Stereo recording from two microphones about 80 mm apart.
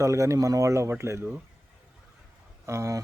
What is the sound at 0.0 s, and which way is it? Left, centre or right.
A man's voice, right.